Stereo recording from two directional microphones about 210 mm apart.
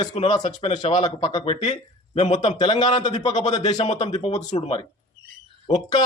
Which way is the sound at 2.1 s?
30° left (ahead or behind).